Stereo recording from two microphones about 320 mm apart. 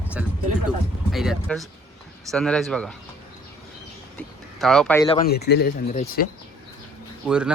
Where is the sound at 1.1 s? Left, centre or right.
Centre.